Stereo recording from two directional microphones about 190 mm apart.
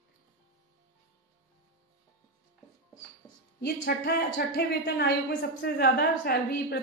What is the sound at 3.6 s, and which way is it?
A woman's voice, 55° left (ahead or behind).